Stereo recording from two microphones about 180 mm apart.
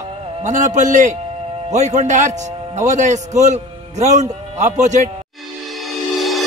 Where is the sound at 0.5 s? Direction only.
45° right (ahead or behind).